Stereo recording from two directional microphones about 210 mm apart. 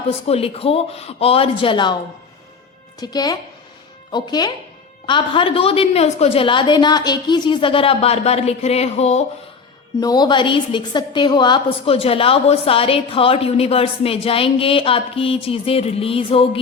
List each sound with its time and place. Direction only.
0.1 s a woman's voice: 30° left (ahead or behind)
3.0 s a woman's voice: 20° left (ahead or behind)
10.0 s a woman's voice: 20° left (ahead or behind)